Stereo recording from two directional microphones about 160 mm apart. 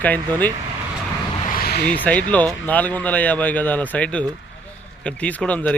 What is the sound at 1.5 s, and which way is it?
Vehicle, 70° left (ahead or behind).